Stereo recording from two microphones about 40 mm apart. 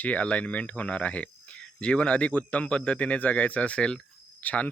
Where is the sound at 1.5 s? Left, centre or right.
Left.